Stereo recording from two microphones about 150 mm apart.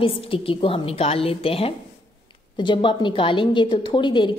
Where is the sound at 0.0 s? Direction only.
35° left (ahead or behind).